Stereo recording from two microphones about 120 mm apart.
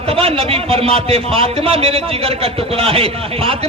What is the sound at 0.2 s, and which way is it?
A man's voice, 55° right (ahead or behind).